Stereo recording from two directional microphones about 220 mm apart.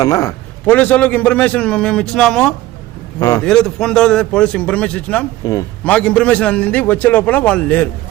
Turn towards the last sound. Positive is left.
turn(degrees=5)  # may be behind; listen again after turning